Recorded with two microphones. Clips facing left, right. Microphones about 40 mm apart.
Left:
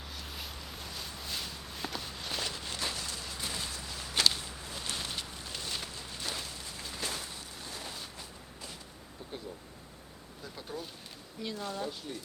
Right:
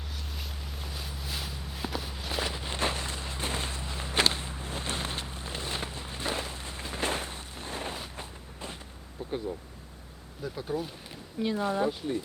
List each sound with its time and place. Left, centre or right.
0.1 s walk: centre; by 2.7 s right
2.7 s walk: right
8.1 s a sound: right
10.4 s speech: centre
11.4 s speech: right